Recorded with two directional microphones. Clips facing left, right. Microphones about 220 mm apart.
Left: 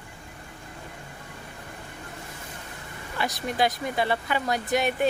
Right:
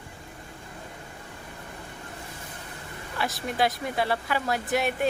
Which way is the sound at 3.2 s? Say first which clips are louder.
Left 1 dB; centre (ahead or behind).